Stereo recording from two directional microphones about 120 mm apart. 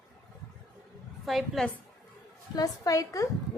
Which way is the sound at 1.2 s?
Centre (ahead or behind).